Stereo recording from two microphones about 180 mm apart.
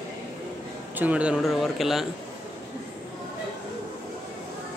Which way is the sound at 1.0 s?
5° right (ahead or behind).